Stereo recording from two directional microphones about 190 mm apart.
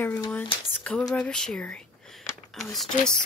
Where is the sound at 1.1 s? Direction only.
5° left (ahead or behind).